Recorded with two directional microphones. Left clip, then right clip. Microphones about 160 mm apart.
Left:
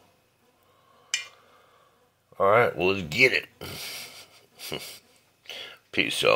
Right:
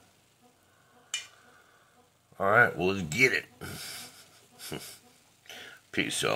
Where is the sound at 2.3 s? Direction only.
10° left (ahead or behind).